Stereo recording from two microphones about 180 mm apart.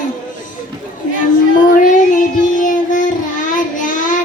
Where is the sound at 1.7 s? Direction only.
45° left (ahead or behind).